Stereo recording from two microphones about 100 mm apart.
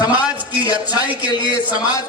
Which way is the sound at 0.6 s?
40° left (ahead or behind).